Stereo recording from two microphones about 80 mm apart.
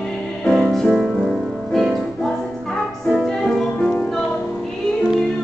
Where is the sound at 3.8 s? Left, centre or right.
Centre.